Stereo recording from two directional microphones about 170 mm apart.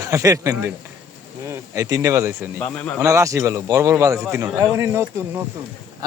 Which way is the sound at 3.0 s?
15° right (ahead or behind).